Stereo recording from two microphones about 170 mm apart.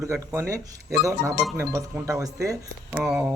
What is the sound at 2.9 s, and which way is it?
Speech, 5° right (ahead or behind).